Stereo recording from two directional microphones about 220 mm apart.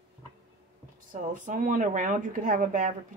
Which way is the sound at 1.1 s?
35° right (ahead or behind).